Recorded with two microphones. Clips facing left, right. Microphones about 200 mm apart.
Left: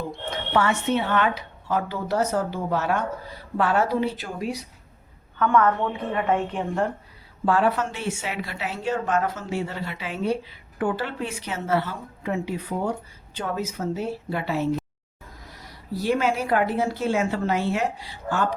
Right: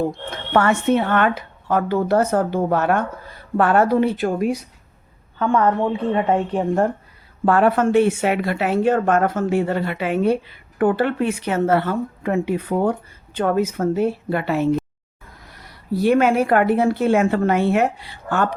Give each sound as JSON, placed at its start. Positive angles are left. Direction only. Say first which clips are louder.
{"t": 0.0, "sound": "speech", "louder": "right 6 dB", "side_deg": -55}
{"t": 5.4, "sound": "a woman's voice", "louder": "right 3 dB", "side_deg": -30}
{"t": 7.4, "sound": "speech", "louder": "right 6 dB", "side_deg": -55}